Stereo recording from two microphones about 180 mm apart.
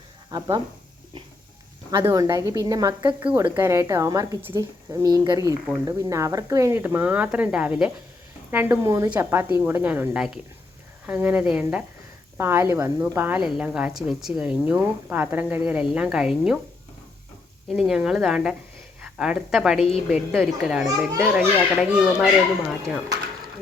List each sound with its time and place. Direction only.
0.3 s speech: 25° right (ahead or behind)
1.9 s a woman's voice: 15° right (ahead or behind)
17.7 s a child's voice: 5° right (ahead or behind)